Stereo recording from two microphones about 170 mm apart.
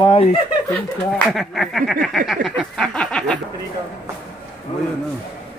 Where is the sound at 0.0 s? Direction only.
35° left (ahead or behind).